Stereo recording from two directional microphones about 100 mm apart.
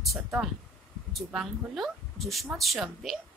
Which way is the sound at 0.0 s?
Centre (ahead or behind).